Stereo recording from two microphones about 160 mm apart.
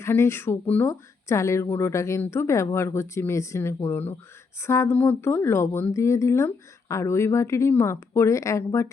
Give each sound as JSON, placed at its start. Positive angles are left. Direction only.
{"t": 0.0, "sound": "speech", "side_deg": 15}